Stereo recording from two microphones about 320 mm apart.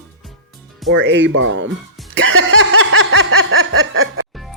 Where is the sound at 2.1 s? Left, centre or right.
Right.